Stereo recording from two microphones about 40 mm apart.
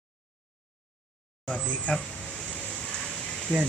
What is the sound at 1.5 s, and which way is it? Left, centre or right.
Speech, left.